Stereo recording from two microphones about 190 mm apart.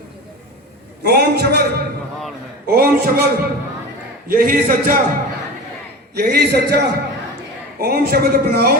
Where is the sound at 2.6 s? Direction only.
55° right (ahead or behind).